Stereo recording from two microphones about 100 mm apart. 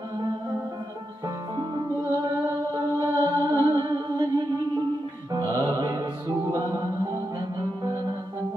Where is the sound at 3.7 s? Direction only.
40° right (ahead or behind).